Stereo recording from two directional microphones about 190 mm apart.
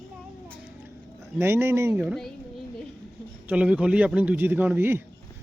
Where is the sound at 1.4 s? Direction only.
10° right (ahead or behind).